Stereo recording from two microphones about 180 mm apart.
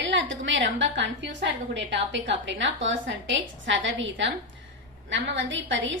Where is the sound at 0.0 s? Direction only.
90° right.